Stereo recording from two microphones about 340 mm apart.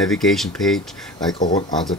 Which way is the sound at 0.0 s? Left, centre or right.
Centre.